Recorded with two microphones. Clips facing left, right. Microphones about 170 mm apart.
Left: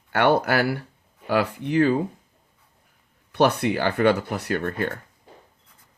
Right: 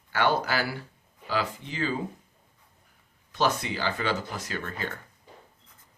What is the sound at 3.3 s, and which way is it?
Speech, 65° left (ahead or behind).